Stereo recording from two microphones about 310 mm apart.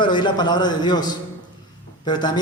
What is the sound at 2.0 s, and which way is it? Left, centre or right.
Speech, centre.